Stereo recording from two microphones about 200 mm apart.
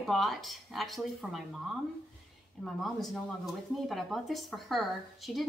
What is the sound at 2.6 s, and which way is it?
A woman's voice, centre (ahead or behind).